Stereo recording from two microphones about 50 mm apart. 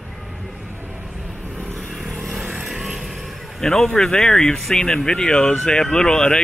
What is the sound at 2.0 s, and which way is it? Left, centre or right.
Vehicle, centre.